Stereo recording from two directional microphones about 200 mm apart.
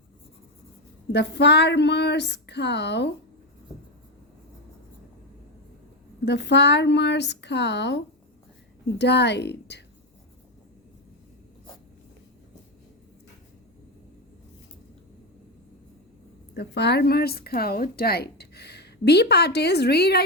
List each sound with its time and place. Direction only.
1.1 s speech: 60° left (ahead or behind)
6.2 s speech: 60° left (ahead or behind)
16.6 s speech: 55° left (ahead or behind)